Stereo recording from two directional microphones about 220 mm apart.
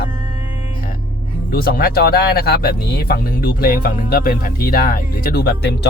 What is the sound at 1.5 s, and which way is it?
Speech, 45° left (ahead or behind).